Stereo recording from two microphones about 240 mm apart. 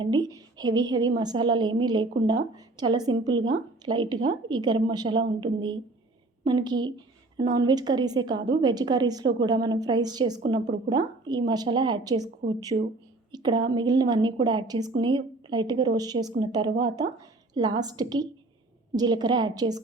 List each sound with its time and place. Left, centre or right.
0.0 s a woman's voice: centre
12.7 s a woman's voice: right
13.3 s speech: centre